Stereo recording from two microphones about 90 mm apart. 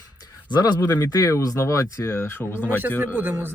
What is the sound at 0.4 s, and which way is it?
Speech, 55° left (ahead or behind).